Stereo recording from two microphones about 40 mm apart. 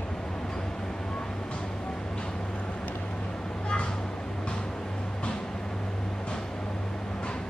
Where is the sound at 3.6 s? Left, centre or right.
Left.